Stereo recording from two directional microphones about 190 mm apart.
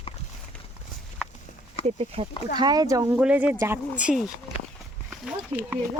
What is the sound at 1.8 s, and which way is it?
Speech, 30° right (ahead or behind).